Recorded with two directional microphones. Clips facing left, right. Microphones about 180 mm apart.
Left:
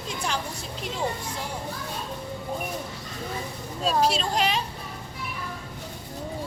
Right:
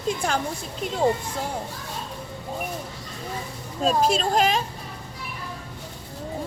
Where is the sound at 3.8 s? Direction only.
50° right (ahead or behind).